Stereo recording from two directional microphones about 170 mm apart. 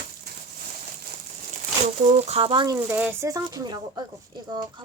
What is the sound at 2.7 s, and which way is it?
Speech, 15° right (ahead or behind).